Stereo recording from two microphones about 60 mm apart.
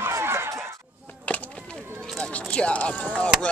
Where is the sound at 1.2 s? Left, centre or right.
Left.